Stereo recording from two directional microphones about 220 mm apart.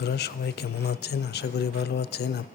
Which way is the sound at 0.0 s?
50° left (ahead or behind).